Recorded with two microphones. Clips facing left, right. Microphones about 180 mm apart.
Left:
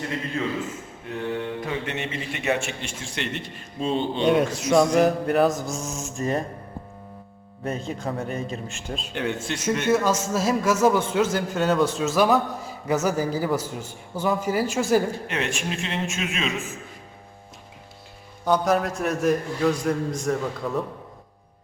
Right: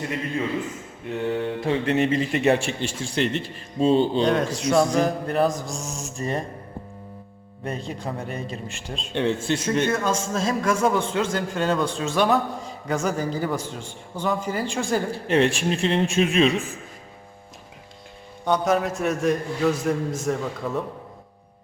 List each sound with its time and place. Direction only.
1.3 s a man's voice: 30° right (ahead or behind)
4.2 s a man's voice: 5° left (ahead or behind)
7.6 s a man's voice: centre (ahead or behind)
9.1 s speech: 30° right (ahead or behind)
9.8 s a man's voice: 5° left (ahead or behind)
15.1 s a man's voice: 30° right (ahead or behind)
18.4 s a man's voice: centre (ahead or behind)